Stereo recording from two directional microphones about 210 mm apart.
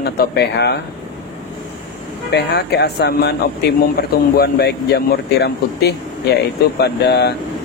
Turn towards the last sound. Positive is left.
turn(degrees=50)  # may be behind; listen again after turning